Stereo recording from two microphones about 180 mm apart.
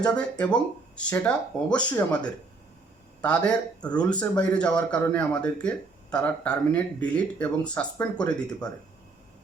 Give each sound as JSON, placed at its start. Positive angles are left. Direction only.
{"t": 0.0, "sound": "speech", "side_deg": 5}